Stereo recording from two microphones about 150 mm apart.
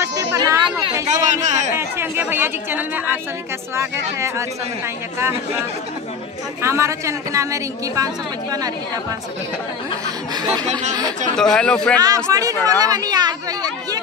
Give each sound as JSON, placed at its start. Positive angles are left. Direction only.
{"t": 0.0, "sound": "a sound", "side_deg": -20}
{"t": 1.0, "sound": "a sound", "side_deg": -55}
{"t": 1.7, "sound": "a woman's voice", "side_deg": -15}
{"t": 10.3, "sound": "a woman's voice", "side_deg": -25}
{"t": 11.3, "sound": "speech", "side_deg": 5}
{"t": 12.3, "sound": "a woman's voice", "side_deg": -25}